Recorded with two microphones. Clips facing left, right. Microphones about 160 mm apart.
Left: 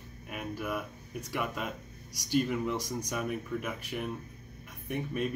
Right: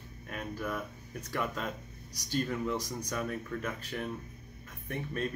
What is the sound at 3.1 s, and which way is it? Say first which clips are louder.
Speech: left 1 dB; 15° left (ahead or behind).